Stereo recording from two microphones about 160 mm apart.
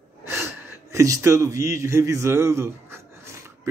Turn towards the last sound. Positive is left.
turn(degrees=-15)  # may be behind; listen again after turning